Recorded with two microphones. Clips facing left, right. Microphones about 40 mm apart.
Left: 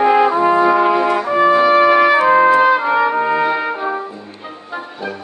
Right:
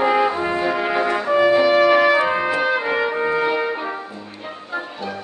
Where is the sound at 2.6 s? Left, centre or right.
Centre.